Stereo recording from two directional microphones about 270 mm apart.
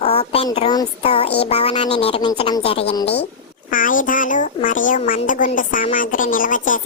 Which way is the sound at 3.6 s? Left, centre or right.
Left.